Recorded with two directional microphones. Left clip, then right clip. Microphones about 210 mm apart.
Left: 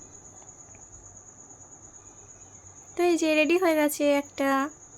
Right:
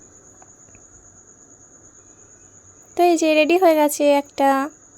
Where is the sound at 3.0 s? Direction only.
25° right (ahead or behind).